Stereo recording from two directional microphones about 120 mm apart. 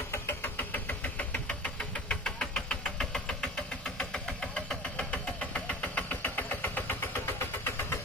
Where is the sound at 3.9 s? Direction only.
5° left (ahead or behind).